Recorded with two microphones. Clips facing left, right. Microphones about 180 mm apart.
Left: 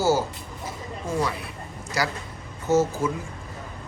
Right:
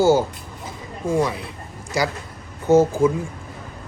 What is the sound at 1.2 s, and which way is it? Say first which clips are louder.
Speech: right 3 dB; 25° right (ahead or behind).